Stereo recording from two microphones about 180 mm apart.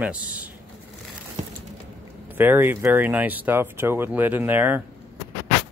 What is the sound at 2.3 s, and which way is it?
Speech, 10° right (ahead or behind).